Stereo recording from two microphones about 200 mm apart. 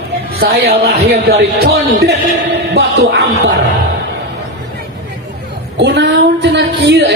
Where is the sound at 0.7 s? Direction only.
50° right (ahead or behind).